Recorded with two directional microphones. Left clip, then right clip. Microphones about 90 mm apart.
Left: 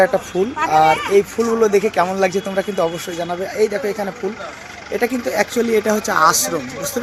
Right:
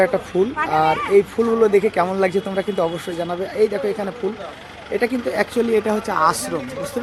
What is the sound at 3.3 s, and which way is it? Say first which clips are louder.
Speech: left 1 dB; 10° right (ahead or behind).